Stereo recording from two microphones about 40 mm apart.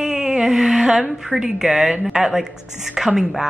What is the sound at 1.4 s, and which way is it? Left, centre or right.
Speech, centre.